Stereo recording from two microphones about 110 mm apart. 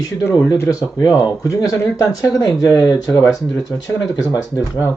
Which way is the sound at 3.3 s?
Centre (ahead or behind).